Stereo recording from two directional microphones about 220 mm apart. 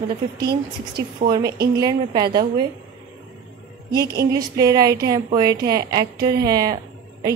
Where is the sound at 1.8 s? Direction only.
15° right (ahead or behind).